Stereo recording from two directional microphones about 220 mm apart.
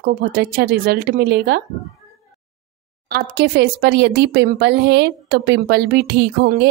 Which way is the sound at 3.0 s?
50° right (ahead or behind).